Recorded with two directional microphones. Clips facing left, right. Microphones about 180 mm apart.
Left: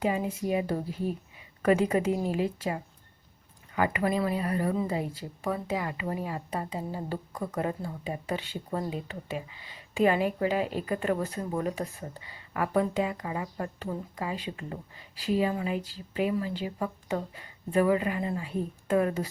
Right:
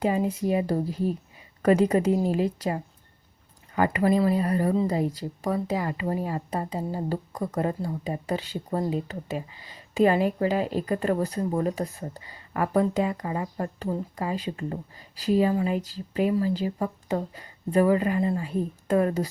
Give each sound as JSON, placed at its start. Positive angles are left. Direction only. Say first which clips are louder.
{"t": 0.0, "sound": "speech", "louder": "right 4 dB", "side_deg": -40}